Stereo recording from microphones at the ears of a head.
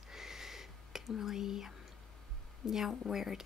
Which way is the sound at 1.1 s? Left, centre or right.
Left.